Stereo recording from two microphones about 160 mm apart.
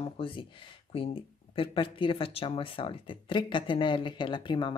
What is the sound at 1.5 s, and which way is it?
Speech, 35° left (ahead or behind).